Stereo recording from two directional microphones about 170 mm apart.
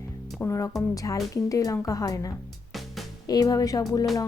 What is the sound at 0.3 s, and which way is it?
A woman's voice, 15° left (ahead or behind).